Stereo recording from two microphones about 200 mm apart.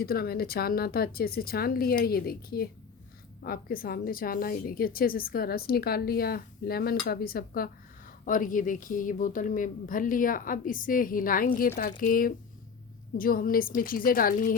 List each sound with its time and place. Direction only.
0.0 s a woman's voice: 50° left (ahead or behind)